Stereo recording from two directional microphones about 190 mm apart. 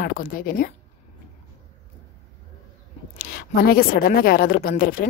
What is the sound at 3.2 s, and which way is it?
A woman's voice, 55° left (ahead or behind).